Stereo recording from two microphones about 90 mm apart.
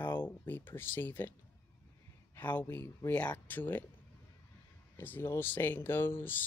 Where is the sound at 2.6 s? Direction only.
30° left (ahead or behind).